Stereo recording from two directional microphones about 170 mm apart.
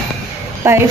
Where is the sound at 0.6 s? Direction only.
15° right (ahead or behind).